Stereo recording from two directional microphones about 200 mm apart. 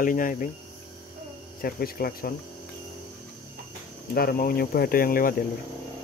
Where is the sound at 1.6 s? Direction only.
50° left (ahead or behind).